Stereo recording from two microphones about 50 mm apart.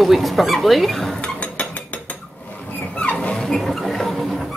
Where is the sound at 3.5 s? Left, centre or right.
Centre.